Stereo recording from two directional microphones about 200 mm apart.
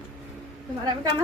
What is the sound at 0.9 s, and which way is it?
Speech, 20° right (ahead or behind).